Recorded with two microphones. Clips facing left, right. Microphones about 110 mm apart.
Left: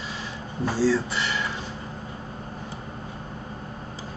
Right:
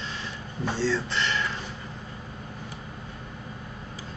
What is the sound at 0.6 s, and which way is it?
Speech, 10° left (ahead or behind).